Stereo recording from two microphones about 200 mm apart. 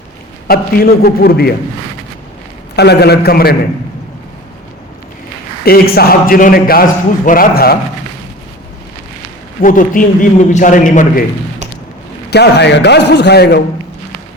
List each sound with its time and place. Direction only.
0.4 s a man's voice: 50° left (ahead or behind)
2.7 s a man's voice: 55° left (ahead or behind)
5.6 s a man's voice: 50° left (ahead or behind)
9.6 s a man's voice: 40° left (ahead or behind)
12.3 s a man's voice: 55° left (ahead or behind)